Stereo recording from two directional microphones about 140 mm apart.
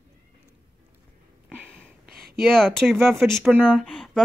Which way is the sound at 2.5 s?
5° left (ahead or behind).